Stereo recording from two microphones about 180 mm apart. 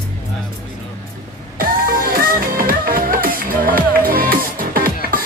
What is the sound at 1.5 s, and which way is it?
Music, 50° right (ahead or behind).